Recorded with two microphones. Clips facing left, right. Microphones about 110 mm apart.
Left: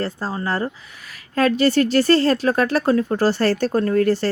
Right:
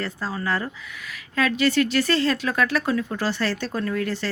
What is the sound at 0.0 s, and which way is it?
Speech, 35° left (ahead or behind).